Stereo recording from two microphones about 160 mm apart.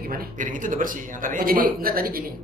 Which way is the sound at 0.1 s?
60° right (ahead or behind).